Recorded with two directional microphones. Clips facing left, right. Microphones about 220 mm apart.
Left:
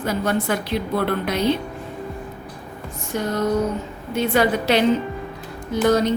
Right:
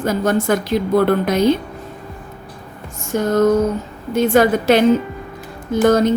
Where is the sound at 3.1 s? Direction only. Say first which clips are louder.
Right 7 dB; 45° right (ahead or behind).